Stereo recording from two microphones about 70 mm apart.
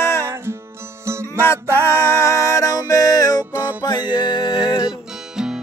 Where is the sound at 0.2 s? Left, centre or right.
Right.